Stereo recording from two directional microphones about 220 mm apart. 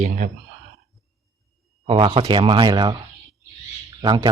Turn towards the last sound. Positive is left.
turn(degrees=-20)  # may be behind; listen again after turning